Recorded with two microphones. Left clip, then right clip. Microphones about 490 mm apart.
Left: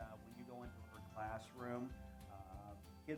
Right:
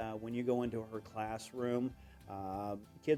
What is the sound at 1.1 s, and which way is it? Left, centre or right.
Speech, right.